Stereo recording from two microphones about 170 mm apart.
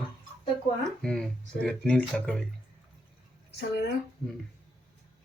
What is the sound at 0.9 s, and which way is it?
Speech, 5° left (ahead or behind).